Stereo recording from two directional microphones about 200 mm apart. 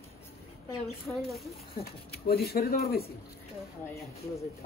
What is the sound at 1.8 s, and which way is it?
Speech, 50° left (ahead or behind).